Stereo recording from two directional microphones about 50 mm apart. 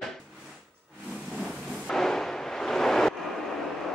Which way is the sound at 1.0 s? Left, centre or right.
Centre.